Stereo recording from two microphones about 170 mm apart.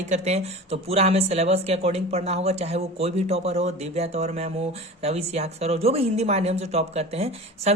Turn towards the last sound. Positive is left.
turn(degrees=-40)  # may be behind; listen again after turning